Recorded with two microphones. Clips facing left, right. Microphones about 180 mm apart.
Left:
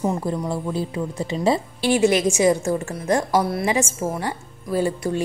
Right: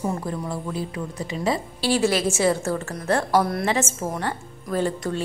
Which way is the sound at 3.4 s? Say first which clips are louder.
Left 1 dB; centre (ahead or behind).